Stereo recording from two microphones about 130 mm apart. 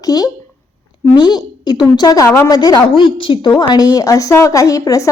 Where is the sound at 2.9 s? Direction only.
40° left (ahead or behind).